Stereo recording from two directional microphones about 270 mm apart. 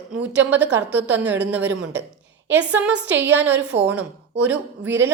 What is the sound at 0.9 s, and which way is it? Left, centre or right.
A woman's voice, centre.